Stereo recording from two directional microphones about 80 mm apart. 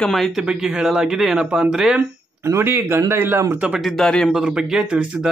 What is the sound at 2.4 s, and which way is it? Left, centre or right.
Speech, right.